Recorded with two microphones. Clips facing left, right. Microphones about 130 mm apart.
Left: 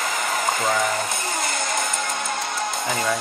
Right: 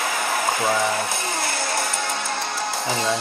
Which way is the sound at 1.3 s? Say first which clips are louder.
Even; 5° right (ahead or behind).